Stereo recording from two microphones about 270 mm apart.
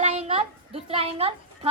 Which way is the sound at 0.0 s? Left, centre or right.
Right.